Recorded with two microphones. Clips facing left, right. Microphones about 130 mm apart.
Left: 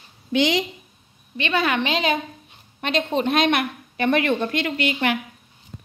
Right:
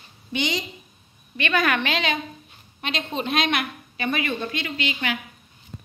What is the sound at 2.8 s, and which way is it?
A woman's voice, 50° left (ahead or behind).